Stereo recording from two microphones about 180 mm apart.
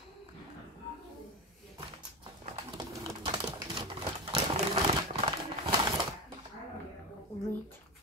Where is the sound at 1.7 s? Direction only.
30° right (ahead or behind).